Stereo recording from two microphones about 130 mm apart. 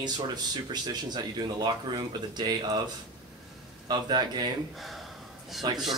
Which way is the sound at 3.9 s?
35° right (ahead or behind).